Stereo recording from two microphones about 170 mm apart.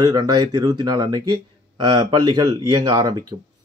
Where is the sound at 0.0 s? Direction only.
25° right (ahead or behind).